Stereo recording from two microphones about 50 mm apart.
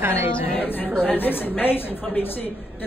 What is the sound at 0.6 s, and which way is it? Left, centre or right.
A woman's voice, left.